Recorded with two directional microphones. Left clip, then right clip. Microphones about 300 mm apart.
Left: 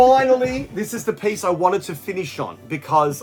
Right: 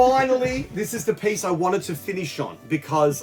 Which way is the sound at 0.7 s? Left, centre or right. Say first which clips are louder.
Even; centre.